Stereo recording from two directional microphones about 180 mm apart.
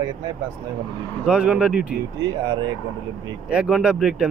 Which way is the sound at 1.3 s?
5° right (ahead or behind).